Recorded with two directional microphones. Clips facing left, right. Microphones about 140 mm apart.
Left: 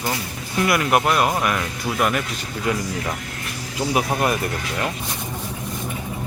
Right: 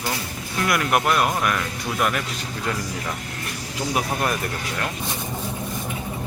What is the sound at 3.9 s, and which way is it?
Speech, 10° left (ahead or behind).